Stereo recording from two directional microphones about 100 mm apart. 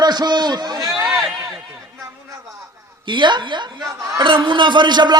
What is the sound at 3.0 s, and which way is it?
Speech, 50° right (ahead or behind).